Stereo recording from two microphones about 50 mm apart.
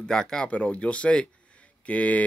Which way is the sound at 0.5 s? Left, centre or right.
Left.